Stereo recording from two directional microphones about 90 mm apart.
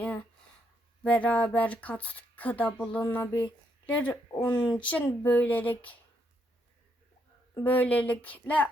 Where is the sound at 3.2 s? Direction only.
35° left (ahead or behind).